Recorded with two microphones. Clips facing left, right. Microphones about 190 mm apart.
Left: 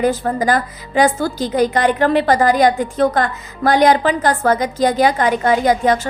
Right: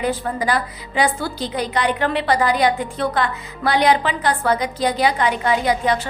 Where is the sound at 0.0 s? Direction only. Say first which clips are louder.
Left 5 dB; 45° left (ahead or behind).